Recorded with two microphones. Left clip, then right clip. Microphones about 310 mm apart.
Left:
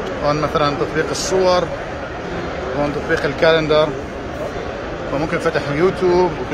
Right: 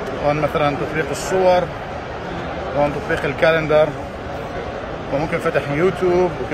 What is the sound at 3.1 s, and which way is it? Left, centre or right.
Speech, centre.